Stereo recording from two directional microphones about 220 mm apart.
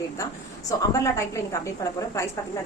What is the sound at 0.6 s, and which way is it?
Speech, 15° left (ahead or behind).